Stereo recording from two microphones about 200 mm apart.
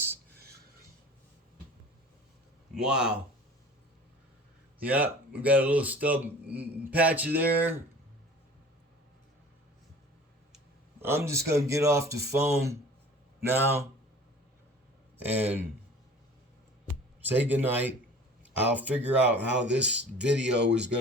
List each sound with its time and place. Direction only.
2.7 s speech: 5° right (ahead or behind)
4.8 s speech: 5° right (ahead or behind)
11.0 s speech: 15° right (ahead or behind)
15.2 s speech: 10° right (ahead or behind)
17.2 s speech: 10° right (ahead or behind)
20.7 s speech: 60° right (ahead or behind)